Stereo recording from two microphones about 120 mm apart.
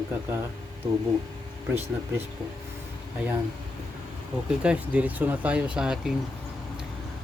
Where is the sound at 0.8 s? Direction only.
55° right (ahead or behind).